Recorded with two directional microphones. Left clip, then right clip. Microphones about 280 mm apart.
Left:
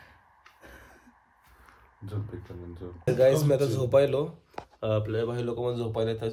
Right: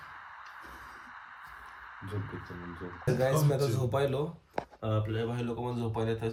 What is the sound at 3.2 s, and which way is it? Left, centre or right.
Speech, centre.